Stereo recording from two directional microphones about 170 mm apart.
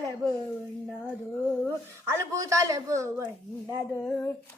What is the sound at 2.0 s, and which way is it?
A woman's voice, 20° right (ahead or behind).